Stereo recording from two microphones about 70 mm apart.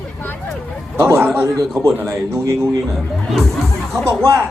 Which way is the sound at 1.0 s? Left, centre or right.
Right.